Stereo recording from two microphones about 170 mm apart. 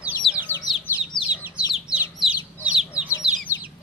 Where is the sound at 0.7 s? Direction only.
5° right (ahead or behind).